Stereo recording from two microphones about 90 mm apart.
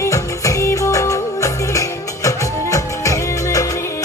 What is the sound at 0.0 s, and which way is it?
Music, 35° left (ahead or behind).